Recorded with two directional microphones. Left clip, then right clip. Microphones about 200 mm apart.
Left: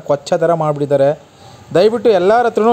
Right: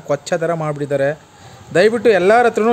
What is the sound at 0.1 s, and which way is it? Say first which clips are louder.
A man's voice: left 5 dB; 10° left (ahead or behind).